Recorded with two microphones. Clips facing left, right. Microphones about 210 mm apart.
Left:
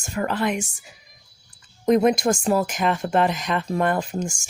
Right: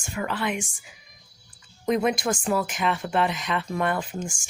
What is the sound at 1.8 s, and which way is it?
Speech, 45° left (ahead or behind).